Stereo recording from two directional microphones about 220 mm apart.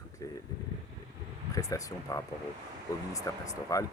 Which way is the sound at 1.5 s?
15° left (ahead or behind).